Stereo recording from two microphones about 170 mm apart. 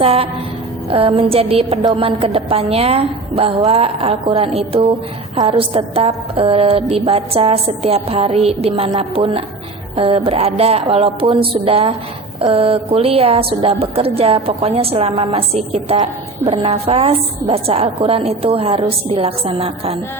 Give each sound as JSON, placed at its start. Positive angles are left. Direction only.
{"t": 0.0, "sound": "speech", "side_deg": -35}